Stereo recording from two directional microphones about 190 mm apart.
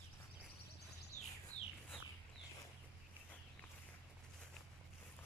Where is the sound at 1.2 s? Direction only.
10° left (ahead or behind).